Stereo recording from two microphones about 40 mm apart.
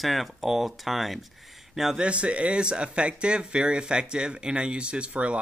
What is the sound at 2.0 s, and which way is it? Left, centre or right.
Speech, right.